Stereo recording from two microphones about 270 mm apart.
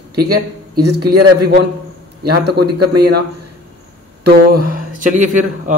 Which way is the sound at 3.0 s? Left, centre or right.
Right.